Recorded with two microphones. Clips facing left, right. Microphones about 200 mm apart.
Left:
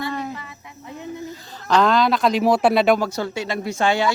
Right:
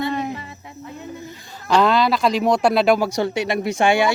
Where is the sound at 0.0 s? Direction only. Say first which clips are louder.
Right 4 dB; 20° right (ahead or behind).